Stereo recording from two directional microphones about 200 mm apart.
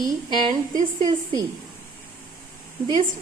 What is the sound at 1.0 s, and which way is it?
Speech, 20° right (ahead or behind).